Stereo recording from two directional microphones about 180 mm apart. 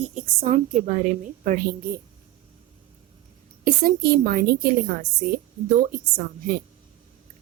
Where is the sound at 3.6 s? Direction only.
55° right (ahead or behind).